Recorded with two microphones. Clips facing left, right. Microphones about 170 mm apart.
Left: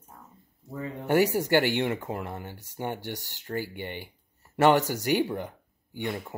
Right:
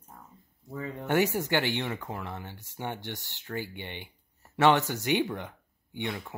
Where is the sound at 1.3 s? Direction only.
10° left (ahead or behind).